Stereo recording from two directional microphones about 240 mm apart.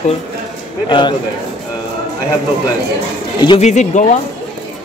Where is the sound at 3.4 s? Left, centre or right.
Left.